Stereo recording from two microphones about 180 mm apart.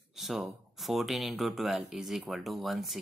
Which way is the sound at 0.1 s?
Centre (ahead or behind).